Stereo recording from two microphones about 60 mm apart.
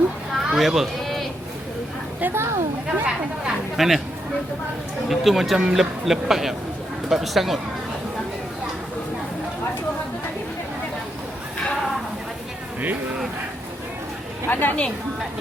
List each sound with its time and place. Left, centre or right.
0.3 s a sound: centre
2.2 s a woman's voice: right
2.8 s speech: centre
3.8 s speech: centre
5.0 s speech: centre
14.5 s a woman's voice: left